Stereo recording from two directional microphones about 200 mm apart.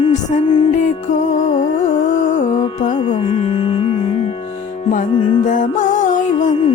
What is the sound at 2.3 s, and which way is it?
Music, 35° left (ahead or behind).